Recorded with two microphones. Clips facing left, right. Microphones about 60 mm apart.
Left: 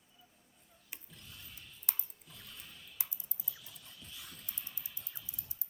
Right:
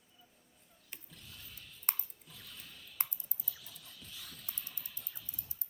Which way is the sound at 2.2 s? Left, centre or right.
Centre.